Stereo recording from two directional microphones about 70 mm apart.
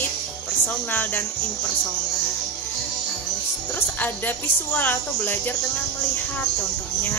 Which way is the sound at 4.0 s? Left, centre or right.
Left.